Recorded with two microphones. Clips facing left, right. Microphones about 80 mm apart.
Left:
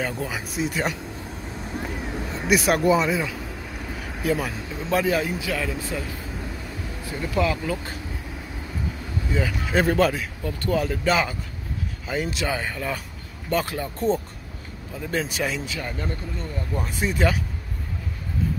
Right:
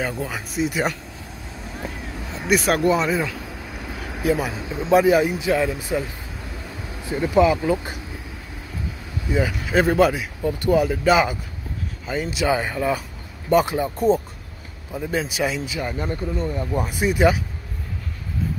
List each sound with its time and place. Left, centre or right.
0.0 s speech: centre
2.3 s speech: centre
7.1 s speech: right
9.3 s speech: centre
12.1 s speech: centre
12.4 s speech: centre